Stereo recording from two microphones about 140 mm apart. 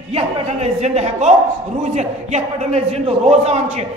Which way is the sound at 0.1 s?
50° right (ahead or behind).